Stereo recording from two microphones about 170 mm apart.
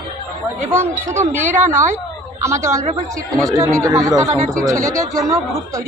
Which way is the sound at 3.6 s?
20° right (ahead or behind).